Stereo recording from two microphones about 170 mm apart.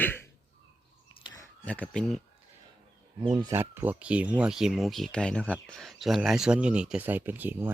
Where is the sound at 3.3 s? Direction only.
20° right (ahead or behind).